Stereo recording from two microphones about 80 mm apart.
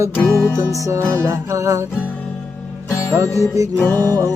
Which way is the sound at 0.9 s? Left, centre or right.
Right.